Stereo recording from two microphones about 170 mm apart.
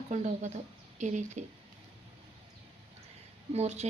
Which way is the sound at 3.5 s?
40° right (ahead or behind).